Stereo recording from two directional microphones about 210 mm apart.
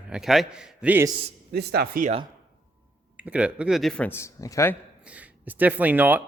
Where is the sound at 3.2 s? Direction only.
5° right (ahead or behind); by 4.8 s 15° left (ahead or behind).